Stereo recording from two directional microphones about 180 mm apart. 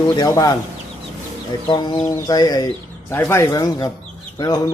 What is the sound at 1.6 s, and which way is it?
A man's voice, 25° left (ahead or behind).